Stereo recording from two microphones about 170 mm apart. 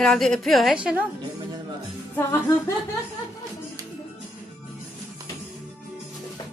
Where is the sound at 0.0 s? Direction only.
5° left (ahead or behind).